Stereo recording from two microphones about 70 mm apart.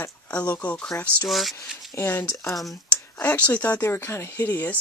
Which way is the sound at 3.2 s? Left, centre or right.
Left.